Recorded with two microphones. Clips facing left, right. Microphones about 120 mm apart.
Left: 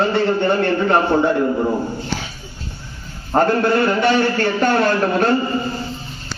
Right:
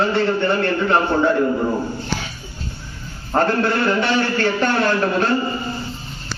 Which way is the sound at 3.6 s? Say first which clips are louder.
Left 3 dB; 35° left (ahead or behind).